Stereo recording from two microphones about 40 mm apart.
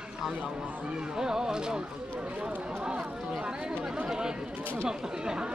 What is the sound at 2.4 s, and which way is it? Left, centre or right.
Music, right.